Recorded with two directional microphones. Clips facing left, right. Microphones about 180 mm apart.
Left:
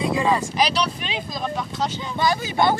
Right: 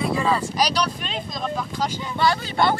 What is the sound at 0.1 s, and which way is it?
Wind noise, 15° left (ahead or behind).